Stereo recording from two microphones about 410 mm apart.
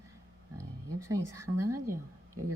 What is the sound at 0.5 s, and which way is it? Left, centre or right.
Speech, centre.